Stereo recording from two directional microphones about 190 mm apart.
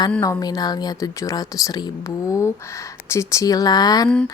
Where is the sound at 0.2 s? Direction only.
20° left (ahead or behind).